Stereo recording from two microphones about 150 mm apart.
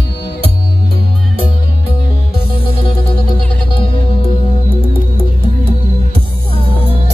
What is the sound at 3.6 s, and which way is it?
Music, 35° left (ahead or behind).